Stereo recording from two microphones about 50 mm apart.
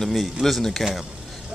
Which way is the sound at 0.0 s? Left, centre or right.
Centre.